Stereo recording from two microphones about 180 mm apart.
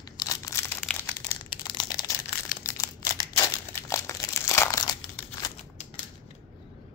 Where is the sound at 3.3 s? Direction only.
30° left (ahead or behind).